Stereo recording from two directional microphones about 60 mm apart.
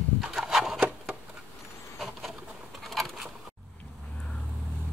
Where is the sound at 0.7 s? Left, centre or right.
Centre.